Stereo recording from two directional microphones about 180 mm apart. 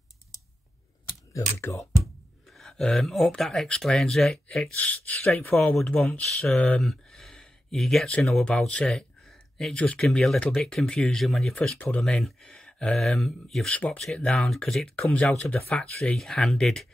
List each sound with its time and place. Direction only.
1.3 s speech: 15° left (ahead or behind)
2.5 s speech: centre (ahead or behind)